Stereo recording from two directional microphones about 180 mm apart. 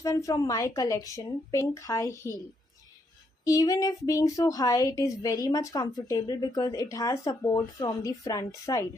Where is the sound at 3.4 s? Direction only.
20° left (ahead or behind).